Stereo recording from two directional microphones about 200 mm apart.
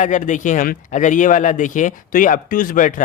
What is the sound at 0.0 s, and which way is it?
Speech, 40° left (ahead or behind).